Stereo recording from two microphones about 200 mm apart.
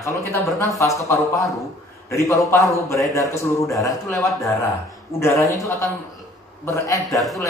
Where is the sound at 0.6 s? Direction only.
15° left (ahead or behind).